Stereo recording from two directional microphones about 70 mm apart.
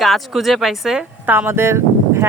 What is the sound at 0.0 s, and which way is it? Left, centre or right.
Speech, centre.